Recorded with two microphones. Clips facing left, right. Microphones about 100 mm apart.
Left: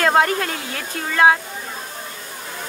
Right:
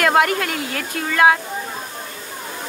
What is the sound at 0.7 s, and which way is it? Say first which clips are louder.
Speech: even; 15° left (ahead or behind).